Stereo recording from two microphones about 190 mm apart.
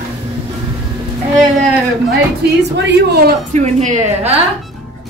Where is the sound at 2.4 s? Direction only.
60° right (ahead or behind).